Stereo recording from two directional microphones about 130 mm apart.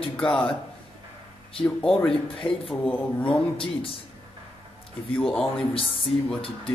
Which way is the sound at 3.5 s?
45° left (ahead or behind).